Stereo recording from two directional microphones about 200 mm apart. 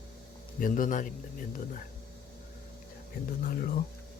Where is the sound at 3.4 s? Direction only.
45° left (ahead or behind).